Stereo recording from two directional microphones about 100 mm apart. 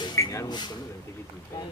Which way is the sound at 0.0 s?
35° left (ahead or behind).